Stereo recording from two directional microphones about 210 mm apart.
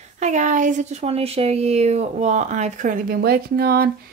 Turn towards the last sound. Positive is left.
turn(degrees=-45)  # may be behind; listen again after turning